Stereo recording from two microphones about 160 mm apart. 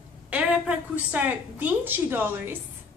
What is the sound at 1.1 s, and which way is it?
A woman's voice, 10° right (ahead or behind).